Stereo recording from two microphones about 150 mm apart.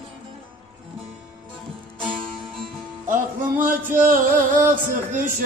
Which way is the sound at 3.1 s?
60° right (ahead or behind).